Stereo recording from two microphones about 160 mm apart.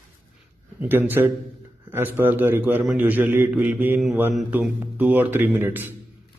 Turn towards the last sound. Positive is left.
turn(degrees=-10)  # may be behind; listen again after turning